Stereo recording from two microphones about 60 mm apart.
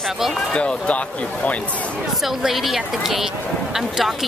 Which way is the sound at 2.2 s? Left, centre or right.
Centre.